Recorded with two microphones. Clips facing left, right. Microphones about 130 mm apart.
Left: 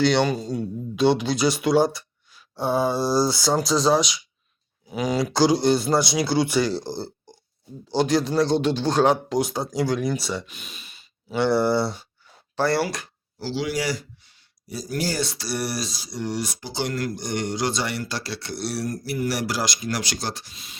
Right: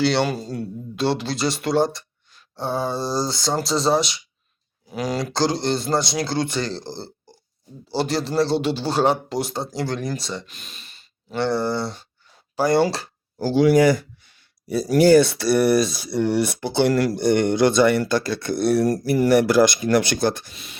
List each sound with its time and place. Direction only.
0.0 s speech: 5° right (ahead or behind)
12.5 s speech: 15° right (ahead or behind)
12.8 s speech: 30° right (ahead or behind)
13.4 s speech: 50° right (ahead or behind)